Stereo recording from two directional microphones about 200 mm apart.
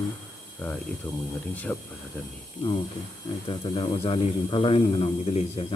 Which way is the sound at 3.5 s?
25° left (ahead or behind).